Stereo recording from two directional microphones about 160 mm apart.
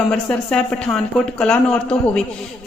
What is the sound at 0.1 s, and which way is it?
A man's voice, 10° left (ahead or behind).